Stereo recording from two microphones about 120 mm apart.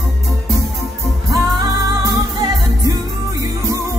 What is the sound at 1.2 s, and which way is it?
Music, 30° right (ahead or behind).